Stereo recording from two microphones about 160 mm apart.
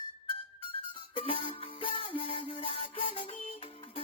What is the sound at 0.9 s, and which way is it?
Music, 35° left (ahead or behind).